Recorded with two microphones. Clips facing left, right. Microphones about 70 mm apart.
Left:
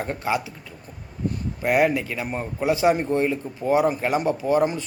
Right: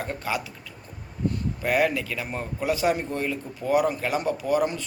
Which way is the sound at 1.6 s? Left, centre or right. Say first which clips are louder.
Left 4 dB; centre.